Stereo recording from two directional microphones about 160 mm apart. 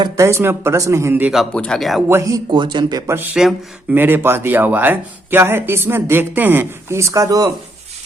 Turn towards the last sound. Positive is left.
turn(degrees=-20)  # may be behind; listen again after turning